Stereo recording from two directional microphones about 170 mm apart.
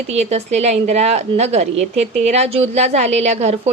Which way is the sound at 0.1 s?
40° right (ahead or behind).